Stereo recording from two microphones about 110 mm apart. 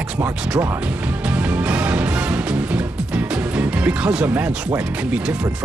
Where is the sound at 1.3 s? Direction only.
15° right (ahead or behind).